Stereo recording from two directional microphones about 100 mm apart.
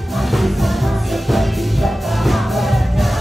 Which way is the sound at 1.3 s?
Centre (ahead or behind).